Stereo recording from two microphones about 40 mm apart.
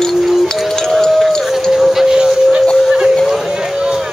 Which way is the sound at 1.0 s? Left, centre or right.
Centre.